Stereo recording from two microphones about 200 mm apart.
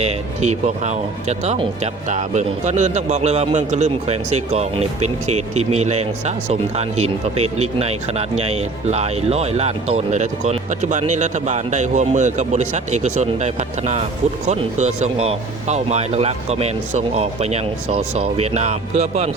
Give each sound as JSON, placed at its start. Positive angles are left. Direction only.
{"t": 0.0, "sound": "speech", "side_deg": -35}